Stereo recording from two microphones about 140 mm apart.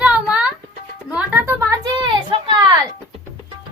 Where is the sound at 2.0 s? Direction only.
35° right (ahead or behind).